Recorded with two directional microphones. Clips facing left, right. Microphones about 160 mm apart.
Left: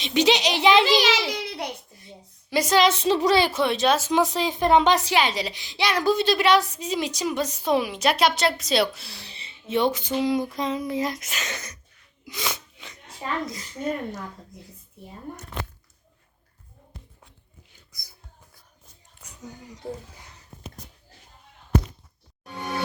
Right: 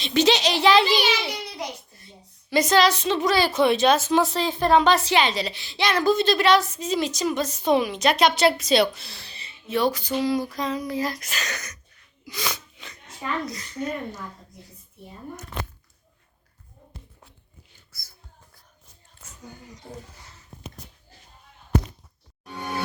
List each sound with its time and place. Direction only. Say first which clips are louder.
0.0 s a woman's voice: right 1 dB; 15° left (ahead or behind)
0.9 s a child's voice: left 2 dB; 90° left
1.9 s a sound: left 4 dB; 15° left (ahead or behind)
2.8 s a woman's voice: left 1 dB; 30° left (ahead or behind)
3.5 s a woman's voice: right 3 dB; centre (ahead or behind)
9.3 s a sound: left 1 dB; 25° left (ahead or behind)
10.2 s speech: left 2 dB; 20° left (ahead or behind)
12.2 s sneeze: even; 20° left (ahead or behind)
13.2 s speech: even; 20° left (ahead or behind)
19.2 s a sound: left 2 dB; 15° left (ahead or behind)